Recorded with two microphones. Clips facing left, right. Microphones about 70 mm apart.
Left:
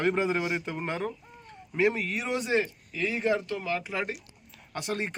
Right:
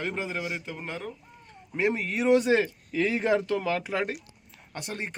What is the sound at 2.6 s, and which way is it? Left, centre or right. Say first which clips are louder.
Speech: right 5 dB; right.